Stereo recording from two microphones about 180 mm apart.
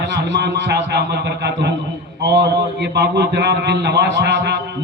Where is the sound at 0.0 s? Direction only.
75° right (ahead or behind).